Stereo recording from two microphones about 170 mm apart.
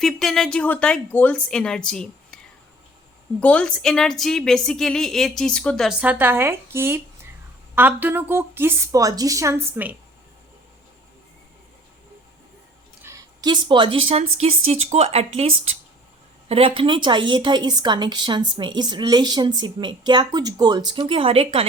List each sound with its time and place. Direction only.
0.0 s a woman's voice: centre (ahead or behind)
3.4 s a woman's voice: 5° left (ahead or behind); by 9.9 s 15° right (ahead or behind)
13.0 s a woman's voice: 15° right (ahead or behind); by 21.7 s 35° right (ahead or behind)